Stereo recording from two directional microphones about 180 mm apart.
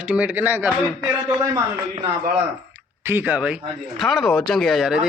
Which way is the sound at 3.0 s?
10° right (ahead or behind).